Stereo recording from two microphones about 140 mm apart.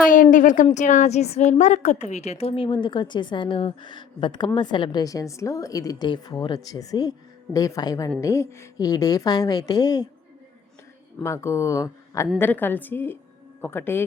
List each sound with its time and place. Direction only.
0.1 s a woman's voice: 70° left (ahead or behind); by 10.1 s 25° left (ahead or behind)
11.2 s a woman's voice: 20° left (ahead or behind)